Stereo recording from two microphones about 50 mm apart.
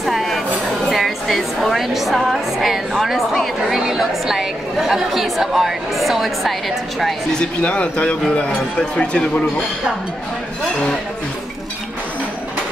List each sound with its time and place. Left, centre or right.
0.0 s music: centre
0.8 s a woman's voice: centre
7.3 s speech: left